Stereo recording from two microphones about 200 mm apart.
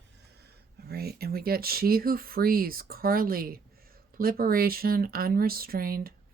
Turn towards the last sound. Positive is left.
turn(degrees=-45)  # may be behind; listen again after turning